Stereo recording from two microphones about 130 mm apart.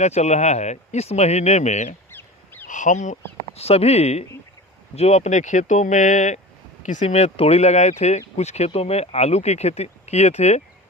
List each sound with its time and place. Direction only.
0.0 s speech: 60° left (ahead or behind)
2.0 s crow: 15° left (ahead or behind)
2.6 s speech: 75° left (ahead or behind)